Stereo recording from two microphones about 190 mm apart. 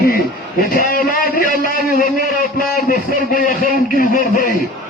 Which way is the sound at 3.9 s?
45° left (ahead or behind).